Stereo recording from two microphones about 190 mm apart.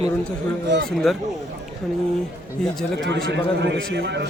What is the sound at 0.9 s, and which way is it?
Speech, centre (ahead or behind).